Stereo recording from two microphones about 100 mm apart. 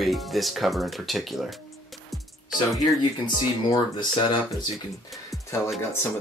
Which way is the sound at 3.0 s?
50° left (ahead or behind).